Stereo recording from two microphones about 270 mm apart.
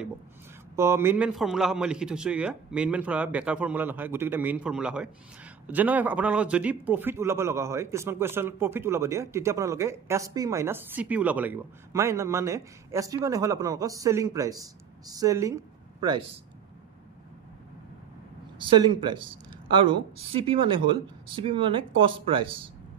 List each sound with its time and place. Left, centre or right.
0.7 s a man's voice: centre
18.7 s speech: centre